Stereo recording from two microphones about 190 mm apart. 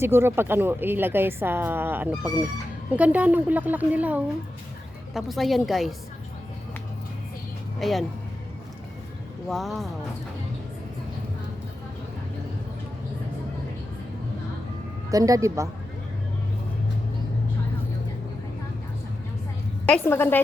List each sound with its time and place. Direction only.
0.0 s a woman's voice: 10° right (ahead or behind)
7.8 s a woman's voice: centre (ahead or behind)
9.5 s a woman's voice: centre (ahead or behind)
15.1 s a woman's voice: 20° right (ahead or behind)
19.9 s a woman's voice: 10° left (ahead or behind)